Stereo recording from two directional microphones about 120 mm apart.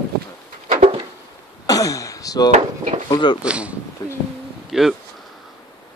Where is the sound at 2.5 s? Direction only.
70° right (ahead or behind).